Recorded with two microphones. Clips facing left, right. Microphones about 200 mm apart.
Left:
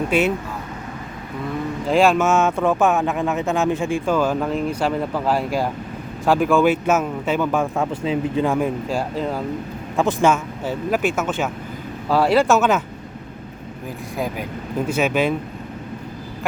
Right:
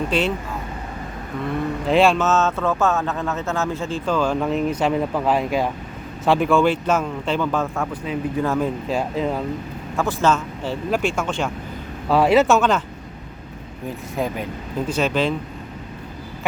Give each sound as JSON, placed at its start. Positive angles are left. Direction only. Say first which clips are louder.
{"t": 0.1, "sound": "speech", "louder": "left 4 dB", "side_deg": 10}
{"t": 1.9, "sound": "speech", "louder": "left 1 dB", "side_deg": 0}
{"t": 8.0, "sound": "speech", "louder": "left 3 dB", "side_deg": 25}
{"t": 8.4, "sound": "speech", "louder": "left 1 dB", "side_deg": 10}
{"t": 10.0, "sound": "speech", "louder": "left 2 dB", "side_deg": 15}
{"t": 12.2, "sound": "speech", "louder": "right 1 dB", "side_deg": -5}
{"t": 12.5, "sound": "speech", "louder": "left 1 dB", "side_deg": 5}
{"t": 14.8, "sound": "speech", "louder": "left 1 dB", "side_deg": 10}